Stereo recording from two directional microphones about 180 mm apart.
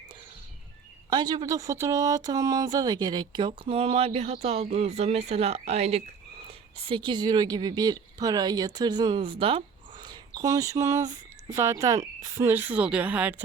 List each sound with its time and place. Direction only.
1.1 s speech: 25° right (ahead or behind); by 13.3 s 10° right (ahead or behind)